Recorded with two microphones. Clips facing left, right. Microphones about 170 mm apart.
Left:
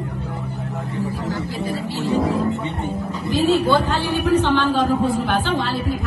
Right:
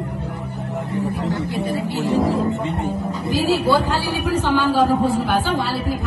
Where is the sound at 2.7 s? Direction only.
35° right (ahead or behind).